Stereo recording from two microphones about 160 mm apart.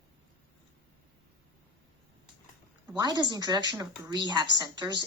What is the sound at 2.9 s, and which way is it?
A child's voice, 25° right (ahead or behind).